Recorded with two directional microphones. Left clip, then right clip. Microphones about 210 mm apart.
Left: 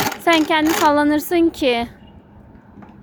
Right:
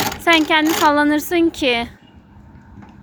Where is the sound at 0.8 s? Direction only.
10° left (ahead or behind).